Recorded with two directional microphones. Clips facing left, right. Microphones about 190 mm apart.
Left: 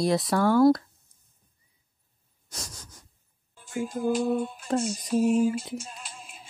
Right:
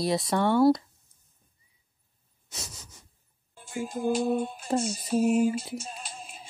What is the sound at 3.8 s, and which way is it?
Music, 25° right (ahead or behind).